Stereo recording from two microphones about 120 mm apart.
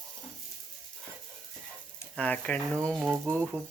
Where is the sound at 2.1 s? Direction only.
10° left (ahead or behind).